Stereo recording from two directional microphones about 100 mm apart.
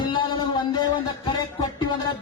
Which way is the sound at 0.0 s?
55° left (ahead or behind).